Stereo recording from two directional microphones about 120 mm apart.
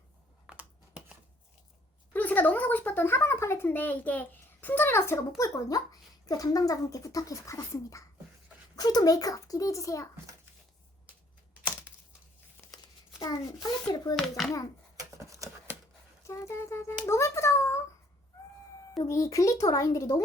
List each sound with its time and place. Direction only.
0.4 s computer keyboard: 10° right (ahead or behind)
2.1 s speech: 15° left (ahead or behind)
12.7 s a child's voice: 30° left (ahead or behind)
14.2 s a child's voice: 5° left (ahead or behind)
14.9 s a sound: 25° right (ahead or behind)
16.2 s speech: 25° left (ahead or behind)
19.0 s speech: 25° left (ahead or behind)